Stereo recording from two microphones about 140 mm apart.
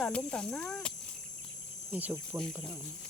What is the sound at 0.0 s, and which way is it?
Speech, 5° left (ahead or behind).